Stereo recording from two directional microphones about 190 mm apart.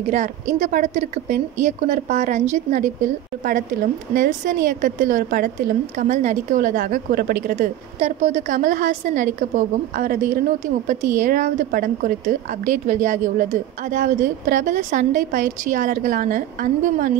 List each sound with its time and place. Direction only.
0.1 s a woman's voice: 40° right (ahead or behind)
4.1 s a woman's voice: 45° right (ahead or behind)
8.0 s a woman's voice: 35° right (ahead or behind)